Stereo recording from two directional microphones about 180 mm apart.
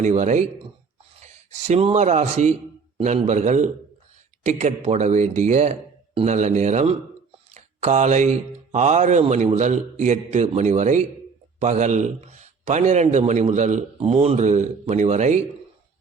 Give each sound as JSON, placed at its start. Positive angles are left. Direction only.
{"t": 0.0, "sound": "speech", "side_deg": -40}
{"t": 7.5, "sound": "a sound", "side_deg": -40}
{"t": 8.7, "sound": "speech", "side_deg": -40}